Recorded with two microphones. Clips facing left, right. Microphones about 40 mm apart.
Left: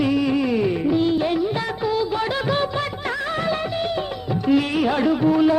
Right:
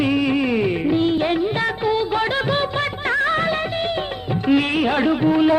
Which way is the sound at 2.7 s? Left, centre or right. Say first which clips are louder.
Right 4 dB; right.